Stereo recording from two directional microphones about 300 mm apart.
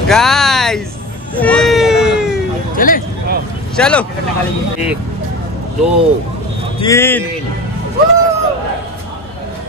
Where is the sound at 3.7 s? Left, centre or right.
Centre.